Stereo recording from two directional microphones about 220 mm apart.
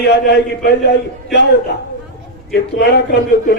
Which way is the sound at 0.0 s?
50° left (ahead or behind).